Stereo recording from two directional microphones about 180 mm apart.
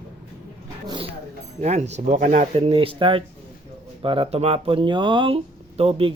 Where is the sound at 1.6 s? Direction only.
40° right (ahead or behind).